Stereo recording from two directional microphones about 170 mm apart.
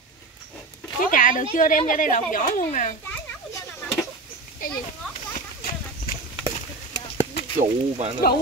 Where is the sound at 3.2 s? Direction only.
15° left (ahead or behind).